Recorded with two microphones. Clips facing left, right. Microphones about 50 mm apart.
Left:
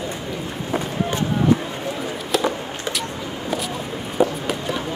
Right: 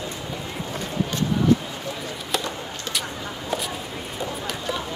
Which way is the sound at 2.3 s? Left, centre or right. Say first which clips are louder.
Left 7 dB; centre.